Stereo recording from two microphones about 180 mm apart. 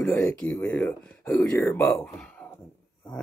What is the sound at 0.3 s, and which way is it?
Speech, 5° left (ahead or behind).